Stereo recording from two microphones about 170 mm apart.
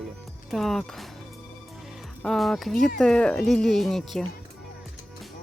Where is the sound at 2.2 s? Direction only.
Centre (ahead or behind).